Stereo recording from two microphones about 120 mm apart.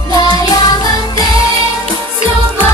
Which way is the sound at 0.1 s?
35° left (ahead or behind).